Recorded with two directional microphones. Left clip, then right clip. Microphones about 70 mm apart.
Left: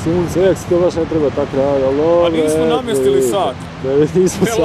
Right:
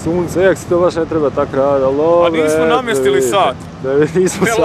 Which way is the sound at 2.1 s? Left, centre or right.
Right.